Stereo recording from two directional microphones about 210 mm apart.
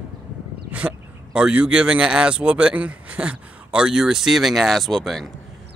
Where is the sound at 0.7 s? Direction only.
5° right (ahead or behind).